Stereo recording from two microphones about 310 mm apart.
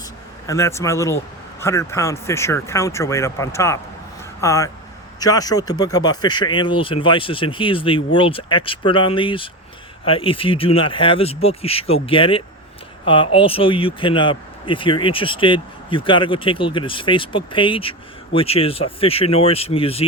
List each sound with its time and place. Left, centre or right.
0.4 s speech: centre